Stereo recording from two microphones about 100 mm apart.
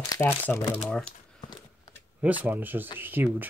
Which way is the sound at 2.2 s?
15° right (ahead or behind).